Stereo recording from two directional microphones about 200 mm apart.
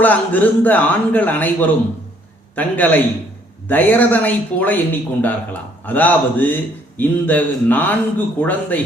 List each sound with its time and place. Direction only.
0.0 s speech: 10° left (ahead or behind)